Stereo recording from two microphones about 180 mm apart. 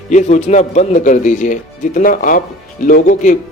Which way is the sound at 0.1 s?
40° left (ahead or behind).